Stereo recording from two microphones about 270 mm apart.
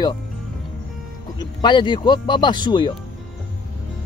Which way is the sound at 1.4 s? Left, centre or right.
Centre.